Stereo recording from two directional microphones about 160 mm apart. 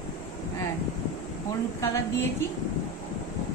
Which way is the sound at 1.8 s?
20° left (ahead or behind).